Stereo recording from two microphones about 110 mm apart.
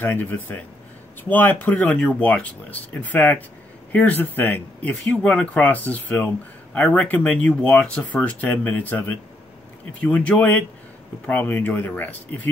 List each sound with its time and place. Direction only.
0.0 s speech: 15° left (ahead or behind)